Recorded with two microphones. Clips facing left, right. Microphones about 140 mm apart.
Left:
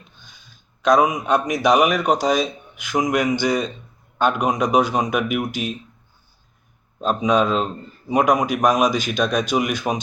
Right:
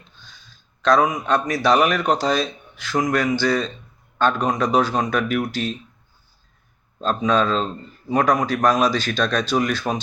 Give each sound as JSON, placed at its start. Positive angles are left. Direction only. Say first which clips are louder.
{"t": 0.8, "sound": "a man's voice", "louder": "left 1 dB", "side_deg": 15}
{"t": 7.0, "sound": "a man's voice", "louder": "left 1 dB", "side_deg": 15}